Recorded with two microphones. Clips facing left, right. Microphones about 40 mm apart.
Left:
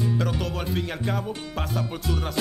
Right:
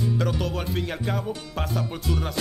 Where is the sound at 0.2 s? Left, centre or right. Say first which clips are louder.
Right 1 dB; centre.